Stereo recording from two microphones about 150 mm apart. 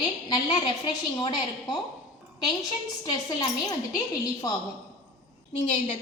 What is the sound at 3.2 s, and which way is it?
Speech, 25° left (ahead or behind).